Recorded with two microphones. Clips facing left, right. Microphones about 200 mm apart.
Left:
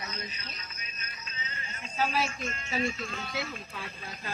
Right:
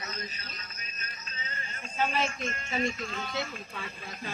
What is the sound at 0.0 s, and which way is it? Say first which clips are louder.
Music: even; 40° right (ahead or behind).